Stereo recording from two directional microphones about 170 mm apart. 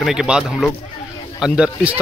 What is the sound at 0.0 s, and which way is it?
Speech, 5° right (ahead or behind).